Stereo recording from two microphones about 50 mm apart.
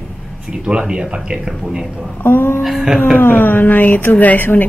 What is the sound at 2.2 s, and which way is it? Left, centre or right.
Speech, left.